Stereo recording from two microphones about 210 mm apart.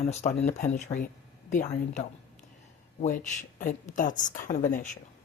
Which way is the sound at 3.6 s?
40° left (ahead or behind).